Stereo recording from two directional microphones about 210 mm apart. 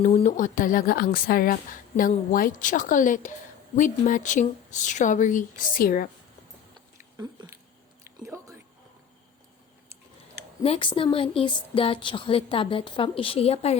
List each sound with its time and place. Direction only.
0.0 s speech: 30° left (ahead or behind)
7.2 s chewing: 15° right (ahead or behind)
8.2 s a sound: 15° right (ahead or behind)
10.6 s a woman's voice: 25° left (ahead or behind)